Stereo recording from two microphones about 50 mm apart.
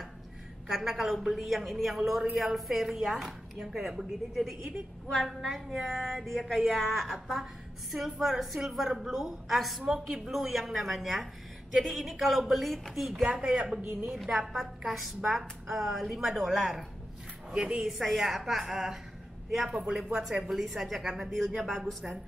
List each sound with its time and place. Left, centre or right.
0.7 s a woman's voice: centre
13.2 s a woman's voice: centre
14.1 s a woman's voice: centre
17.8 s a woman's voice: centre